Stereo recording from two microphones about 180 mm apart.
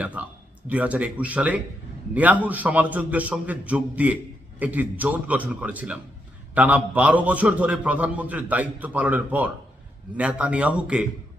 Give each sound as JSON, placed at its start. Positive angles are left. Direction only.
{"t": 0.0, "sound": "a man's voice", "side_deg": -10}